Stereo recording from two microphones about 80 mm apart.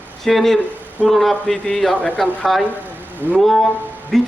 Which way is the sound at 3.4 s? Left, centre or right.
Centre.